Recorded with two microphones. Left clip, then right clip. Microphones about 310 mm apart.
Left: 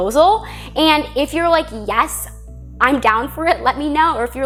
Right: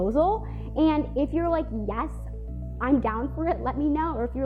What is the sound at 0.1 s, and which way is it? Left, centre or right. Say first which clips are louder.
A woman's voice: left 11 dB; centre.